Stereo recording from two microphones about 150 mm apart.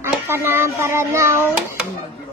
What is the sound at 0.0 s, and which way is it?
A child's voice, 15° right (ahead or behind).